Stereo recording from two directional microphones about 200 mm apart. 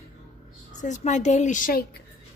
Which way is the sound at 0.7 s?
35° left (ahead or behind).